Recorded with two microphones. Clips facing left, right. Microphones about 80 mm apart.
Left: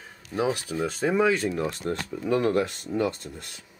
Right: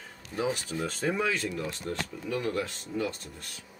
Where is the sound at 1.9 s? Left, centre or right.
Left.